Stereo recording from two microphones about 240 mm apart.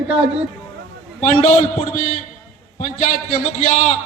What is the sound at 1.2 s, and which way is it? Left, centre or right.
A man's voice, left.